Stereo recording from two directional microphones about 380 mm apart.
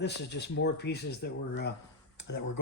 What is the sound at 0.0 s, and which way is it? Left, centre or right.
Speech, left.